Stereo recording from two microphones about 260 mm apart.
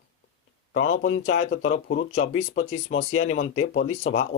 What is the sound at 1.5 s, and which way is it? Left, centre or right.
Speech, left.